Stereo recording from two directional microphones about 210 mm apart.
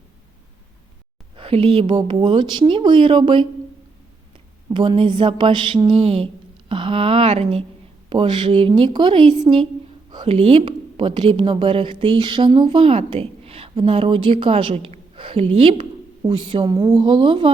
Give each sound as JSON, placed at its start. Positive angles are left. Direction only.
{"t": 1.4, "sound": "speech", "side_deg": -25}
{"t": 4.7, "sound": "speech", "side_deg": -20}